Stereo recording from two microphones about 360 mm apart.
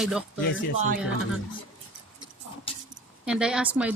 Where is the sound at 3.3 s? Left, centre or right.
Centre.